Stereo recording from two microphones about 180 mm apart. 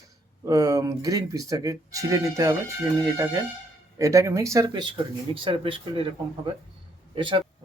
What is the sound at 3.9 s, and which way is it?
Speech, 20° right (ahead or behind).